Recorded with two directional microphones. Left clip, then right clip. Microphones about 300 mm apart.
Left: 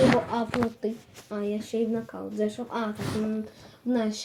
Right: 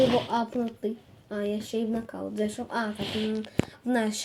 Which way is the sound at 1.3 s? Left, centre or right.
Centre.